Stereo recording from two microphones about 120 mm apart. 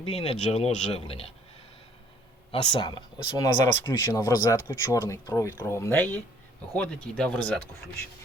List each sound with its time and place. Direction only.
0.0 s speech: 55° left (ahead or behind)
2.5 s speech: 40° left (ahead or behind); by 7.6 s 10° left (ahead or behind)